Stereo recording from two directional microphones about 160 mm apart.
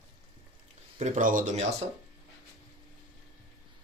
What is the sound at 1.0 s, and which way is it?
Speech, 50° right (ahead or behind).